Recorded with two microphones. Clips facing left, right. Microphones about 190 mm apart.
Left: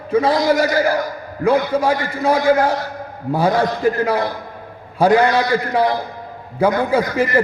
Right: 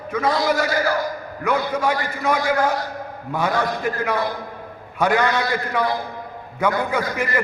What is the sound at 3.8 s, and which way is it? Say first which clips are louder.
Speech: left 7 dB; 30° left (ahead or behind).